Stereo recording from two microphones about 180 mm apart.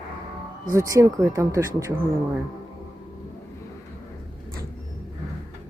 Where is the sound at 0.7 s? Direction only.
15° right (ahead or behind).